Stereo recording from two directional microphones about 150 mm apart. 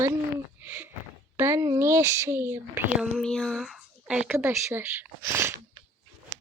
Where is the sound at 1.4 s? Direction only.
20° right (ahead or behind).